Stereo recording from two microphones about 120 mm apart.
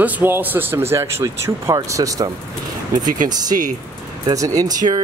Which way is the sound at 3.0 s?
90° right.